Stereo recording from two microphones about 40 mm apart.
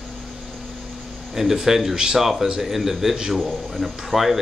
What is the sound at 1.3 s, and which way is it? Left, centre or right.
Speech, centre.